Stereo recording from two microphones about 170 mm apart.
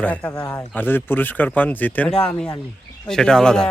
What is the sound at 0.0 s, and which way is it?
Speech, 10° left (ahead or behind).